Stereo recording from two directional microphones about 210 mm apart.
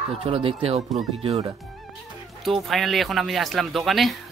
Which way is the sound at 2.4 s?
Centre (ahead or behind).